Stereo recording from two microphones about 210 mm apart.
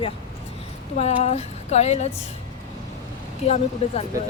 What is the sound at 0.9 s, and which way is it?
Speech, 30° left (ahead or behind).